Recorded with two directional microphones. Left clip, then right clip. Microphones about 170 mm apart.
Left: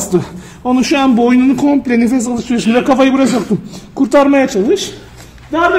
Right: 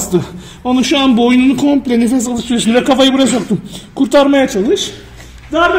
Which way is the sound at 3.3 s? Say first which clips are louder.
Left 1 dB; 25° left (ahead or behind).